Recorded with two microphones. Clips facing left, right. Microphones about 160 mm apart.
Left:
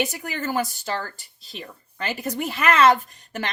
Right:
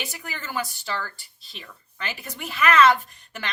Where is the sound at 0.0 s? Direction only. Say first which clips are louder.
Left 9 dB; 45° left (ahead or behind).